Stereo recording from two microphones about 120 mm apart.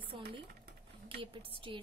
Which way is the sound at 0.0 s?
45° right (ahead or behind).